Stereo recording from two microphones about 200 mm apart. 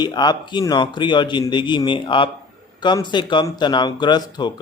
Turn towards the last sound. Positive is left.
turn(degrees=20)  # may be behind; listen again after turning